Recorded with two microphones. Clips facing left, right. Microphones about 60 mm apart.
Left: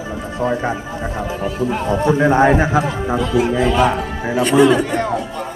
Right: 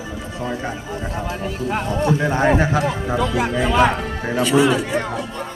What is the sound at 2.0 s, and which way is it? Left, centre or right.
A man's voice, left.